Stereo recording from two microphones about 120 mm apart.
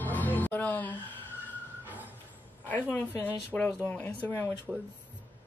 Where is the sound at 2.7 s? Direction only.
15° left (ahead or behind).